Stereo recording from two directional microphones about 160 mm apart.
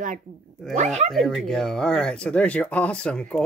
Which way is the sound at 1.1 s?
Centre (ahead or behind).